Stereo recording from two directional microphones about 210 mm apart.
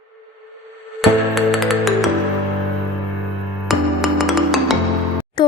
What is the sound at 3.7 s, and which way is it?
Music, centre (ahead or behind).